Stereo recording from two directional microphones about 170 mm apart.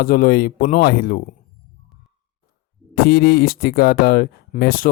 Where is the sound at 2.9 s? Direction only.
65° left (ahead or behind).